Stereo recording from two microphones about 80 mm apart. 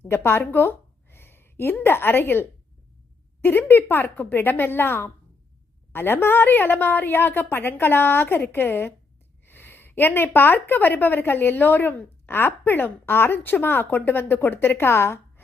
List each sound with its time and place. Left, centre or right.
0.0 s a woman's voice: left
3.7 s a woman's voice: left